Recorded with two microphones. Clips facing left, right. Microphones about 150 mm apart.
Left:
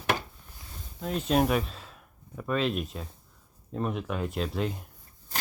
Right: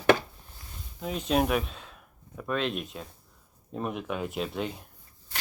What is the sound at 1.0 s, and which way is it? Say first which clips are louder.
Speech: left 1 dB; centre (ahead or behind).